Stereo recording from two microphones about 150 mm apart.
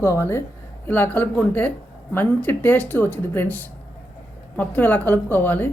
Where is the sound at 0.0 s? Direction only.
15° left (ahead or behind).